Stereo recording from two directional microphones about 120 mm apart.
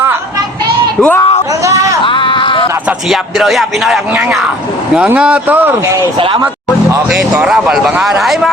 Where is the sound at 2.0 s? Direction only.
45° left (ahead or behind).